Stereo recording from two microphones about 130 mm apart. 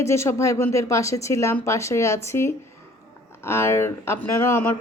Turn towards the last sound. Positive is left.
turn(degrees=15)  # may be behind; listen again after turning